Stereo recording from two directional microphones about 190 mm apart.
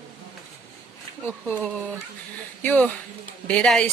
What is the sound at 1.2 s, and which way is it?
Speech, 5° left (ahead or behind).